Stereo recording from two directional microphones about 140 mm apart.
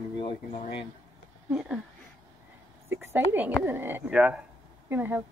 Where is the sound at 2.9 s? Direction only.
15° right (ahead or behind).